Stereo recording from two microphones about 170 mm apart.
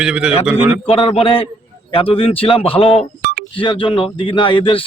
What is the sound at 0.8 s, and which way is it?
A man's voice, 35° left (ahead or behind).